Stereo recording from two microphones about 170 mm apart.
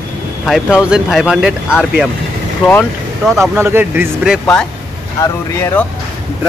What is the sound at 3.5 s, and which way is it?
Speech, 15° right (ahead or behind).